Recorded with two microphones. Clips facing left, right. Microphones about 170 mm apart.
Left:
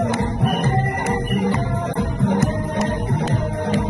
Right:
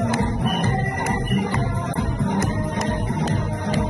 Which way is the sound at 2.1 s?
65° left (ahead or behind).